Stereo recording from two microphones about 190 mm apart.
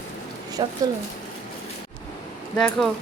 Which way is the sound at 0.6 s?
20° right (ahead or behind).